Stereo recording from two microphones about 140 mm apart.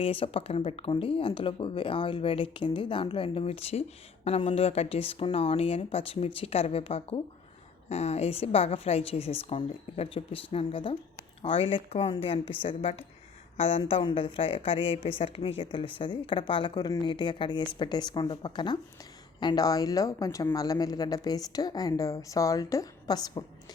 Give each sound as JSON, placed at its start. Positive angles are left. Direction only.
{"t": 0.0, "sound": "a woman's voice", "side_deg": 40}